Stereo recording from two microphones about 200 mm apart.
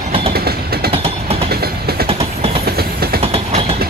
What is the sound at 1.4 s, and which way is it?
Train, 50° right (ahead or behind).